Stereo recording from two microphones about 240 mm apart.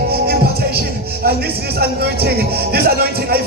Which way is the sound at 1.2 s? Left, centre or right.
Right.